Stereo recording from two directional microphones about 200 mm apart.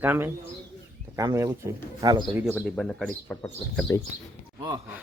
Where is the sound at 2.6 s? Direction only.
Centre (ahead or behind).